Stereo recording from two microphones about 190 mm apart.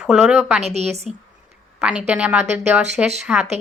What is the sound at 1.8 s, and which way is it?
Speech, 5° right (ahead or behind).